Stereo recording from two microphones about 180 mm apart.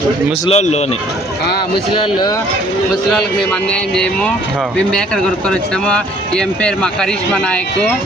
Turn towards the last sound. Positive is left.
turn(degrees=5)  # may be behind; listen again after turning